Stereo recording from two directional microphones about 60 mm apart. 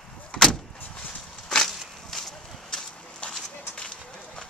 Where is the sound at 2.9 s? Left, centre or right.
Centre.